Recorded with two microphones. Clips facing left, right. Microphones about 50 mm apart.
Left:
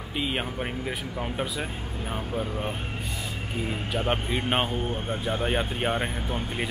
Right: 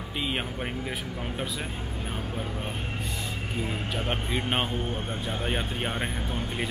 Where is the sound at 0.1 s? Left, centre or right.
Centre.